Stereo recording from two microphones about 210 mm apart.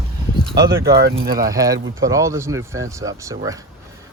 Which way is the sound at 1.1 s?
45° right (ahead or behind).